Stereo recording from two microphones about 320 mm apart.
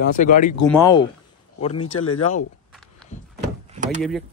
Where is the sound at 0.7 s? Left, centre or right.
Centre.